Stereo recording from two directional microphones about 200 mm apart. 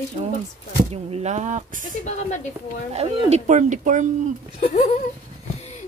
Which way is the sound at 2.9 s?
35° right (ahead or behind).